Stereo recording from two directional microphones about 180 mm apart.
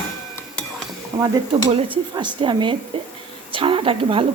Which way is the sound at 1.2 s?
25° right (ahead or behind).